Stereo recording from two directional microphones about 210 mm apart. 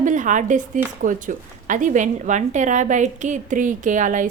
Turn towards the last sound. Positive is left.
turn(degrees=-35)  # may be behind; listen again after turning